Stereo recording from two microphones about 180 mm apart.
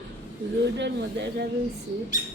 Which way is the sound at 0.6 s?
75° right (ahead or behind).